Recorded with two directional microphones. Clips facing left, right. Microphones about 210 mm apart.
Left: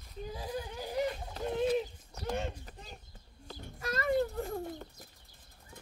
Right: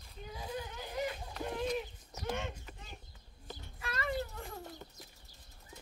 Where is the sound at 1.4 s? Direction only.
30° left (ahead or behind).